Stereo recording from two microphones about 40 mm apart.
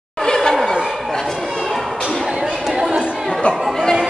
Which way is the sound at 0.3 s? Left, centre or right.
Centre.